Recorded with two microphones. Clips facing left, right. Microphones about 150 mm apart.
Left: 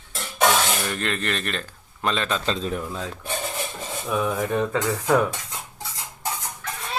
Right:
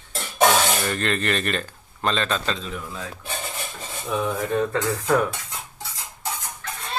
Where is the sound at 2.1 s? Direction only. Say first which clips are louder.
Even; 10° left (ahead or behind).